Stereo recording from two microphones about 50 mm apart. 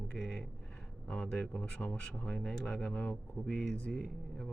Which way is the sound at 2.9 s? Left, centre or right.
Left.